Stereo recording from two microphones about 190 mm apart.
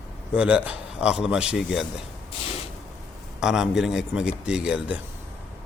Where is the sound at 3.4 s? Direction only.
5° right (ahead or behind).